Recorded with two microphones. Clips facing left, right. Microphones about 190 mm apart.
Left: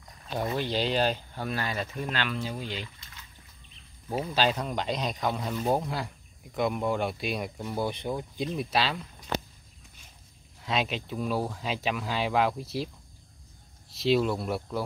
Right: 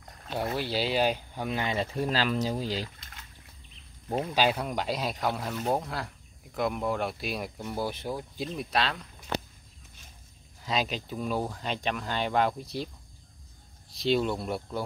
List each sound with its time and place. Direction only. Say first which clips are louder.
0.6 s speech: even; 10° right (ahead or behind)
2.0 s speech: right 6 dB; 35° right (ahead or behind)
4.3 s speech: even; 10° right (ahead or behind)
10.6 s speech: left 1 dB; centre (ahead or behind)